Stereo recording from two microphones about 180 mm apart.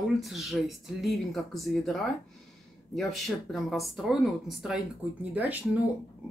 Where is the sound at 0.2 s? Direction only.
Centre (ahead or behind).